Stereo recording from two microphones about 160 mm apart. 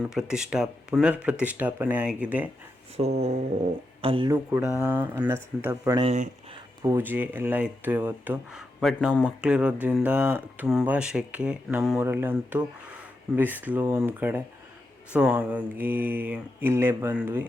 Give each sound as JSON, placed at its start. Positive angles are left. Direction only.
{"t": 0.0, "sound": "speech", "side_deg": -5}
{"t": 3.0, "sound": "a sound", "side_deg": -40}
{"t": 4.0, "sound": "speech", "side_deg": -35}
{"t": 4.9, "sound": "speech", "side_deg": -10}
{"t": 6.0, "sound": "speech", "side_deg": -40}
{"t": 6.8, "sound": "speech", "side_deg": -15}
{"t": 8.8, "sound": "speech", "side_deg": 0}
{"t": 11.9, "sound": "speech", "side_deg": -15}